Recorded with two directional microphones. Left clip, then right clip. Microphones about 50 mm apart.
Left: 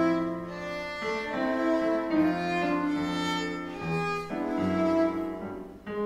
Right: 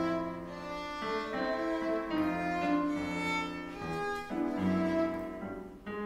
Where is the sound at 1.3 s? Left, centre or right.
Right.